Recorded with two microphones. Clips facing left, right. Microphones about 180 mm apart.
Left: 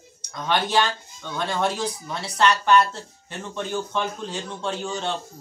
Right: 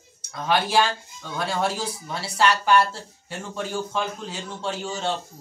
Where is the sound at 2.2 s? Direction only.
10° right (ahead or behind).